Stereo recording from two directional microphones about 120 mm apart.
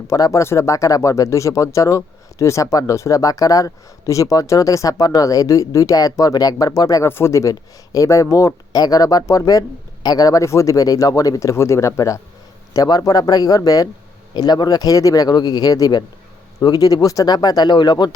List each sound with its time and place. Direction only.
0.1 s speech: 25° left (ahead or behind)